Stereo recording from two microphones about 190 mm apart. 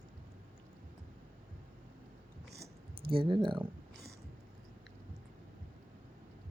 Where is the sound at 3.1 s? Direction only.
25° right (ahead or behind).